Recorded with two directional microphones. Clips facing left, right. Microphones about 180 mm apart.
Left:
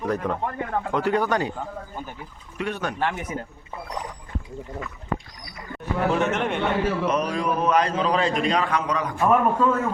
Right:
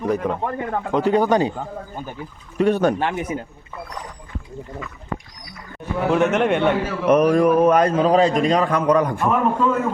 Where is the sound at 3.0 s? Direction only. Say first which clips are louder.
Right 3 dB; 20° right (ahead or behind).